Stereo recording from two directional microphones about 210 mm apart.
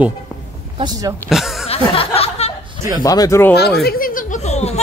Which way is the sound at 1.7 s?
30° left (ahead or behind).